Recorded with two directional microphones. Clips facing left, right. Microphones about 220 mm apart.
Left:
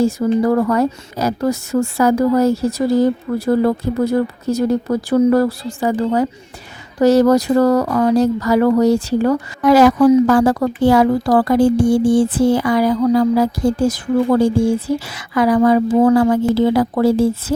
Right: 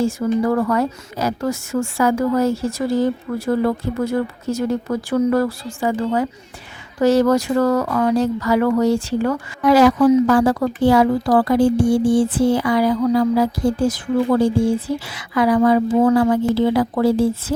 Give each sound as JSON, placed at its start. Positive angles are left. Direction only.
{"t": 0.0, "sound": "speech", "side_deg": 40}
{"t": 15.0, "sound": "speech", "side_deg": 45}